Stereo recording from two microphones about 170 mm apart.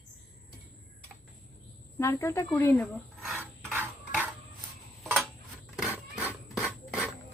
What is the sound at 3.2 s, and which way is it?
Filing, 5° right (ahead or behind).